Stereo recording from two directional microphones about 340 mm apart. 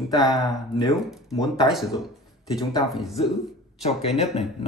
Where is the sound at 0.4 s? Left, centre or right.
Centre.